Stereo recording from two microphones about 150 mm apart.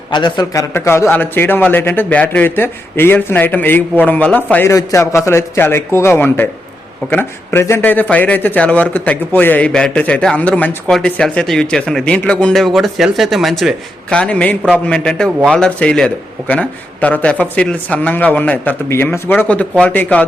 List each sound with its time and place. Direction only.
0.1 s a man's voice: 30° left (ahead or behind)
0.7 s a man's voice: 15° left (ahead or behind)